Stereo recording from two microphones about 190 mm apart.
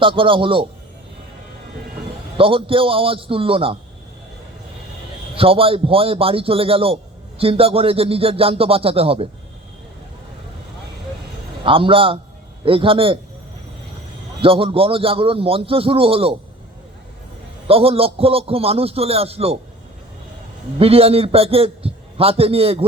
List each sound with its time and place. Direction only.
0.0 s a man's voice: 25° right (ahead or behind)
2.4 s a man's voice: 30° right (ahead or behind)
5.3 s a man's voice: 30° right (ahead or behind)
11.6 s a man's voice: 25° right (ahead or behind)
14.4 s a man's voice: 30° right (ahead or behind)
17.7 s a man's voice: 30° right (ahead or behind)
20.7 s a man's voice: 30° right (ahead or behind)